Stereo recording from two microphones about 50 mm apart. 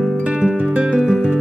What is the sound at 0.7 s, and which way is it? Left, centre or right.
Music, right.